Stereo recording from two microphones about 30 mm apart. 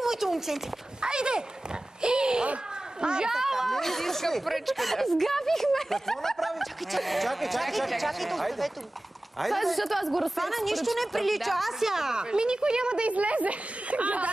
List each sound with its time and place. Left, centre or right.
0.0 s a sound: centre
1.0 s a sound: right
3.0 s speech: right
3.3 s a woman's voice: centre
3.7 s speech: centre
6.4 s speech: centre
11.8 s a woman's voice: centre
12.2 s speech: right
13.0 s speech: right